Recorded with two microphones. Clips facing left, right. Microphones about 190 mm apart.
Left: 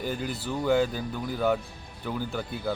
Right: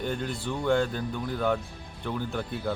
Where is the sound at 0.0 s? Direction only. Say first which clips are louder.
Even; 5° left (ahead or behind).